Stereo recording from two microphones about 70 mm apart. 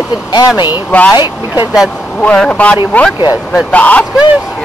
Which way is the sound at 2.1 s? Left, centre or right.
Centre.